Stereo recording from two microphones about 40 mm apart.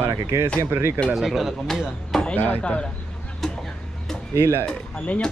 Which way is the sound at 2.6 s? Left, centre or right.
Left.